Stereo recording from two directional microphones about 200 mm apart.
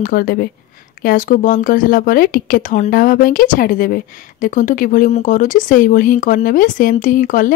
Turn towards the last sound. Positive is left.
turn(degrees=40)  # may be behind; listen again after turning